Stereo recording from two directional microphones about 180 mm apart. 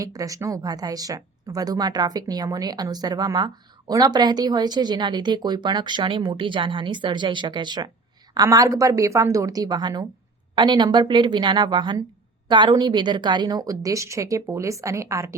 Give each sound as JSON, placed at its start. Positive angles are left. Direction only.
{"t": 0.0, "sound": "speech", "side_deg": -20}